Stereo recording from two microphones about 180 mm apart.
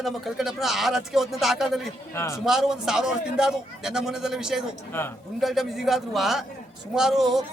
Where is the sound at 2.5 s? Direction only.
5° right (ahead or behind).